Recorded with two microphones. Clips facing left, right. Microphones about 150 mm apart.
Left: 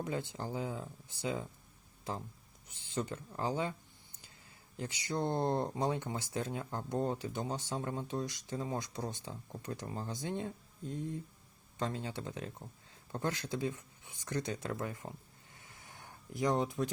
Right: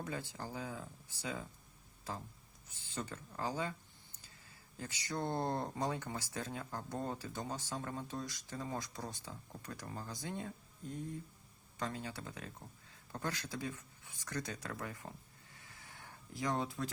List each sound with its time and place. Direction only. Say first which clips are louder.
0.0 s speech: left 5 dB; 20° left (ahead or behind)
2.6 s speech: left 6 dB; 20° left (ahead or behind)
4.8 s speech: left 4 dB; 20° left (ahead or behind)
15.5 s a sound: left 2 dB; 20° left (ahead or behind)